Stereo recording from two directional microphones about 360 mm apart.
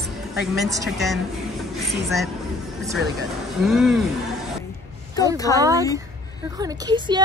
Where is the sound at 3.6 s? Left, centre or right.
Centre.